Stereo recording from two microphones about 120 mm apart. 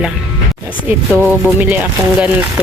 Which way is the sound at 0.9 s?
15° right (ahead or behind).